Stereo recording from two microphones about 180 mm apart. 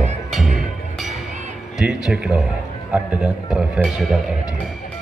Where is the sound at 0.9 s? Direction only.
Centre (ahead or behind).